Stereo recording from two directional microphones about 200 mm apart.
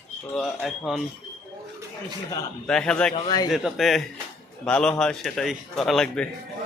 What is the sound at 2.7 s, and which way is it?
Speech, 5° left (ahead or behind).